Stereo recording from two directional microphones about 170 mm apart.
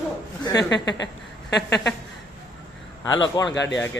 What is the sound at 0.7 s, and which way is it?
Speech, 90° left.